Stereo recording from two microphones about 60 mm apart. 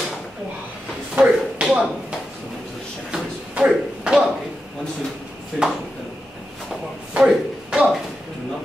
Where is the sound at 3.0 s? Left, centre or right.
Centre.